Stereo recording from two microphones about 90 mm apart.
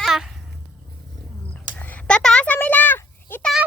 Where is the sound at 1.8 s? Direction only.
15° left (ahead or behind).